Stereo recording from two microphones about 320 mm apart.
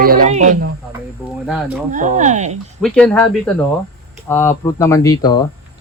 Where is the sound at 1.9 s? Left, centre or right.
Right.